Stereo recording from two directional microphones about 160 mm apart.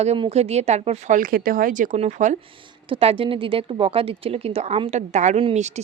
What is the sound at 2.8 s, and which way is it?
Speech, 35° right (ahead or behind).